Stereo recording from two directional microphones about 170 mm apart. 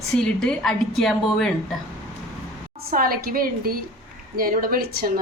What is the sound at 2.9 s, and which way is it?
A woman's voice, 55° right (ahead or behind).